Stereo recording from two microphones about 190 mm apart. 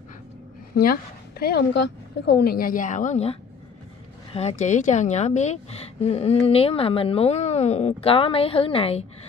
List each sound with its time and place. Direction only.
1.4 s a woman's voice: 60° left (ahead or behind); by 9.0 s 30° left (ahead or behind)